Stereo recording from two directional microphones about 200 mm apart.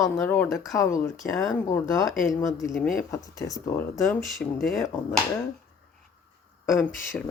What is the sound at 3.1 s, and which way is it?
Speech, 15° left (ahead or behind).